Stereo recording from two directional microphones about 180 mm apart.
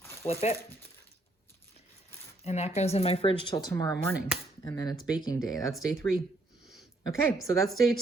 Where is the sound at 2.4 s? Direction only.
35° left (ahead or behind).